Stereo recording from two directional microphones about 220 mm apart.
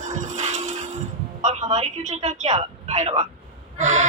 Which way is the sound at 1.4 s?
30° right (ahead or behind).